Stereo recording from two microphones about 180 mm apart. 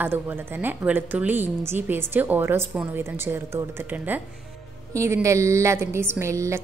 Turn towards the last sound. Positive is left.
turn(degrees=-15)  # may be behind; listen again after turning